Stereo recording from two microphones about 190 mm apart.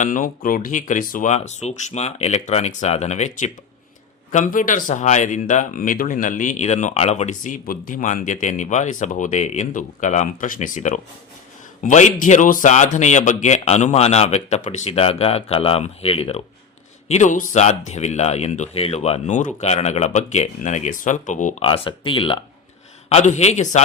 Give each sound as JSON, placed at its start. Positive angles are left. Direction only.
{"t": 0.0, "sound": "speech", "side_deg": 45}
{"t": 21.6, "sound": "speech", "side_deg": 25}